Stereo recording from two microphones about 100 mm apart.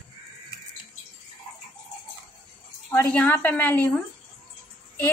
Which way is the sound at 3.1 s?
15° left (ahead or behind).